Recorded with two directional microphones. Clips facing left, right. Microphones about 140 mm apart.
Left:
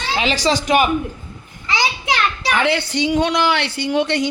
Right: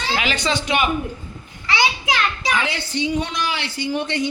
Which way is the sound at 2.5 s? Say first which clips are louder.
Left 5 dB; 65° left (ahead or behind).